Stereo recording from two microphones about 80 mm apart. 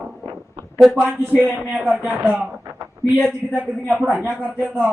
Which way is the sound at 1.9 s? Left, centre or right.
Centre.